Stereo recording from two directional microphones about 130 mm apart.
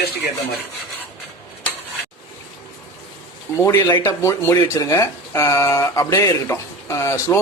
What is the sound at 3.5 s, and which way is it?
Speech, 25° left (ahead or behind).